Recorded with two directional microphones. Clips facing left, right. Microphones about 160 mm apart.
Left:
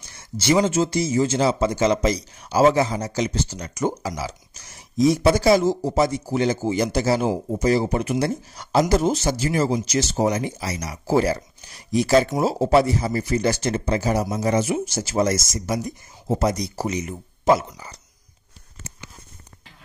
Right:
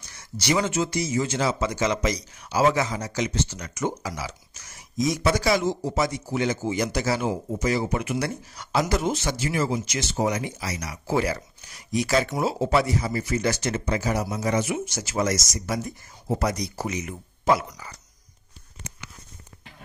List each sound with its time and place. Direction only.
0.2 s speech: 25° left (ahead or behind)